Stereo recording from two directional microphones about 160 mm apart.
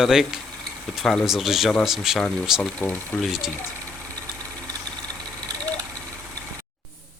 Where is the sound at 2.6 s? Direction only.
10° left (ahead or behind).